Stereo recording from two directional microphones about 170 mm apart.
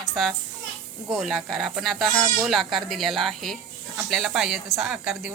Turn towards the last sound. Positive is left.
turn(degrees=-5)  # may be behind; listen again after turning